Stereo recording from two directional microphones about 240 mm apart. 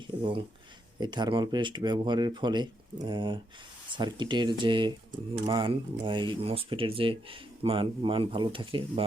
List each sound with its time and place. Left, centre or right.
0.2 s speech: right